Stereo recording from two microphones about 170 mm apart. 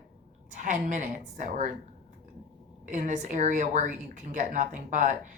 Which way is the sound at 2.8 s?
45° right (ahead or behind).